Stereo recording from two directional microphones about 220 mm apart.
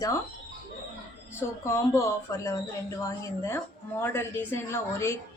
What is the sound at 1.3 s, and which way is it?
A woman's voice, 15° left (ahead or behind).